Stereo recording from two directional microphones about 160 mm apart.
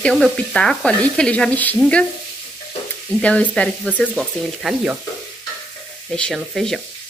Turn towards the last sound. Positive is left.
turn(degrees=0)  # may be behind; listen again after turning